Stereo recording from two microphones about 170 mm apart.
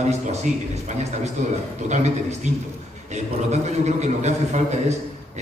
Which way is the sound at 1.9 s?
40° right (ahead or behind).